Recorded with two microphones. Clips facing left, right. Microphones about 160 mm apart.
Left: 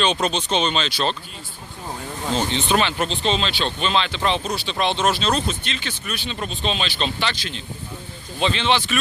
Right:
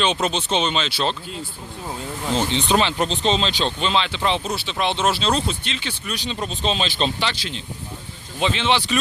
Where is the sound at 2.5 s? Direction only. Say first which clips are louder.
Right 2 dB; 20° right (ahead or behind).